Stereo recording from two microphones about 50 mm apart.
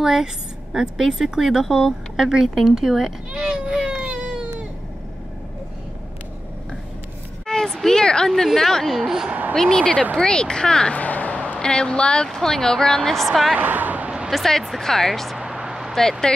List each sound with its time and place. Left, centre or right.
0.0 s speech: centre
3.3 s baby cry: centre
7.4 s a sound: centre
8.5 s speech: centre
9.0 s speech: centre
9.6 s speech: centre
11.0 s a sound: left
11.6 s speech: centre
13.6 s a sound: right
14.3 s speech: centre
15.3 s vehicle: centre
15.9 s speech: centre